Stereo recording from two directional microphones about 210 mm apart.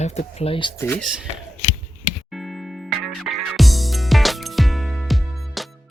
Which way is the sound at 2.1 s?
Centre (ahead or behind).